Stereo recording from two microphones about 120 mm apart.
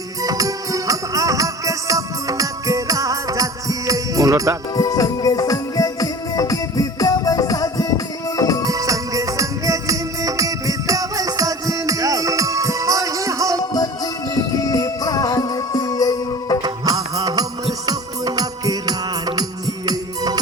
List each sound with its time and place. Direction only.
0.2 s music: 30° right (ahead or behind)
4.7 s music: 30° left (ahead or behind)
8.6 s music: 30° right (ahead or behind)
13.7 s music: 30° left (ahead or behind)
16.6 s music: 30° right (ahead or behind)